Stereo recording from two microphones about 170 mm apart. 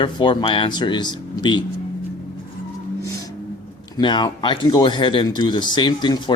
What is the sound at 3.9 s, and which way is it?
Speech, 25° left (ahead or behind).